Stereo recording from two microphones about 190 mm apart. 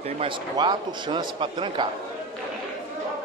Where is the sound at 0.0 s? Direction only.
25° right (ahead or behind).